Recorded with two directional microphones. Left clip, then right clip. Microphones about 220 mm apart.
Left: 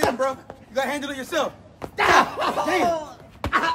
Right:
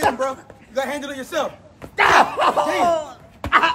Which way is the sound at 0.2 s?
Centre (ahead or behind).